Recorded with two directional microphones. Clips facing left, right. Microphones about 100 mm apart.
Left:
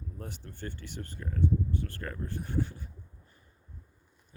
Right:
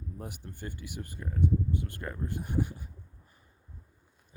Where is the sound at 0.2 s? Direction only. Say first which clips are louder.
Left 1 dB; 15° right (ahead or behind).